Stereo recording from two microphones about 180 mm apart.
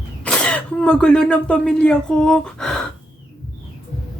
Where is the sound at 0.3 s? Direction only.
5° left (ahead or behind).